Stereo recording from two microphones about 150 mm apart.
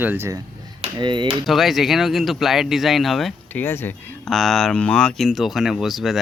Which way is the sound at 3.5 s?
15° left (ahead or behind).